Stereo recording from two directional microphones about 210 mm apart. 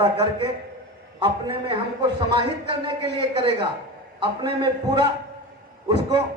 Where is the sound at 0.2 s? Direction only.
25° right (ahead or behind).